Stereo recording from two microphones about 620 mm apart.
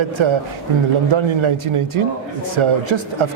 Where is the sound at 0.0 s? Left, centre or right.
Right.